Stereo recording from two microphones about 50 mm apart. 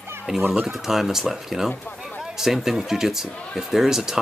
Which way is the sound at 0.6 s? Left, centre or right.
Centre.